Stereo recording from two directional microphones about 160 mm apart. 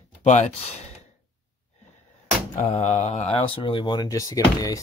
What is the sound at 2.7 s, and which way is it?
Speech, 40° left (ahead or behind).